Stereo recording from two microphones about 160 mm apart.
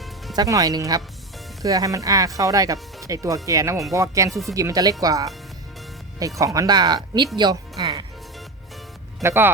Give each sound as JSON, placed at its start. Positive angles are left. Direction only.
{"t": 0.3, "sound": "speech", "side_deg": -20}
{"t": 4.3, "sound": "speech", "side_deg": 0}
{"t": 4.5, "sound": "speech", "side_deg": -20}
{"t": 6.4, "sound": "speech", "side_deg": -20}
{"t": 7.3, "sound": "music", "side_deg": -30}
{"t": 9.2, "sound": "speech", "side_deg": -15}